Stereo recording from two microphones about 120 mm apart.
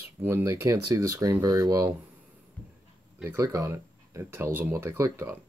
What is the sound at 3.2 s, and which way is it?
Speech, 25° right (ahead or behind).